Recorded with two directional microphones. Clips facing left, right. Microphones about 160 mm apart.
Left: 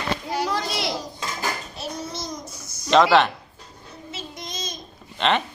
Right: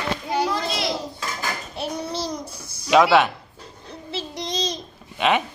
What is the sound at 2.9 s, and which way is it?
Speech, 10° right (ahead or behind).